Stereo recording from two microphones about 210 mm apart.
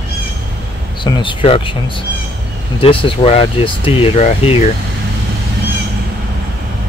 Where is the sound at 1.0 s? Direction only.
20° left (ahead or behind).